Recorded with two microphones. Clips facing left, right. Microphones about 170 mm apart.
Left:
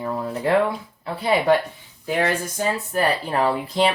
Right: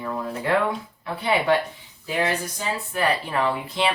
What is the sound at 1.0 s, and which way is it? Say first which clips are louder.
Speech: left 3 dB; 35° left (ahead or behind).